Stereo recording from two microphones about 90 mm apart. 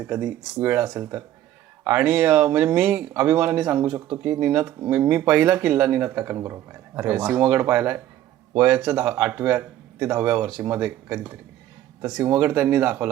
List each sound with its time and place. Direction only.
0.0 s speech: 20° right (ahead or behind)
3.8 s speech: 30° right (ahead or behind)